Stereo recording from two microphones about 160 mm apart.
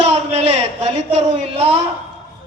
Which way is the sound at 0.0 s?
40° right (ahead or behind).